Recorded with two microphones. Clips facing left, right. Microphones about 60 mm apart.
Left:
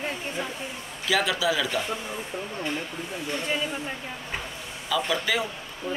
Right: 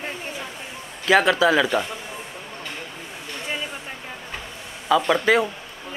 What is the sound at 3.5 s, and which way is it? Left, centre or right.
Speech, centre.